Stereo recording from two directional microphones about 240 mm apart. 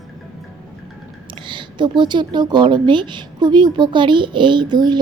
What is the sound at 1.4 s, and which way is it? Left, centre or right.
Speech, centre.